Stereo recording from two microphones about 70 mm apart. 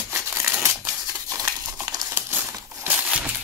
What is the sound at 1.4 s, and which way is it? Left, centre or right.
Crumpling, right.